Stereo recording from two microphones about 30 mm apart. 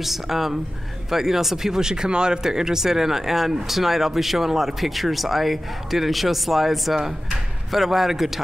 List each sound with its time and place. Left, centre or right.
0.0 s speech: centre
1.8 s speech: right
2.4 s speech: centre